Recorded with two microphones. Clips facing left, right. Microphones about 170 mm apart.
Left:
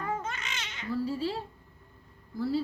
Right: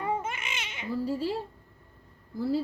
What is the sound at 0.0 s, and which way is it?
Babbling, 25° right (ahead or behind).